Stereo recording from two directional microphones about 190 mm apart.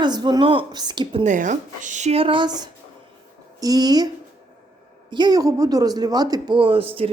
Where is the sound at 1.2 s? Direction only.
40° right (ahead or behind); by 4.1 s 20° right (ahead or behind).